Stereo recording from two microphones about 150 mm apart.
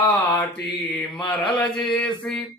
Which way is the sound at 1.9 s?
5° left (ahead or behind).